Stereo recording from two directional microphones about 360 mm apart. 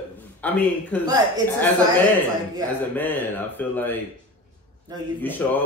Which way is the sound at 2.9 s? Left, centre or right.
Centre.